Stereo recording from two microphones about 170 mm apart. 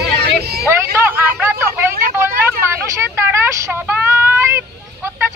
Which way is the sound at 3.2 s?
15° right (ahead or behind).